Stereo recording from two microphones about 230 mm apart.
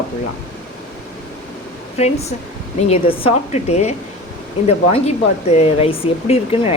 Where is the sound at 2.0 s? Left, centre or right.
Left.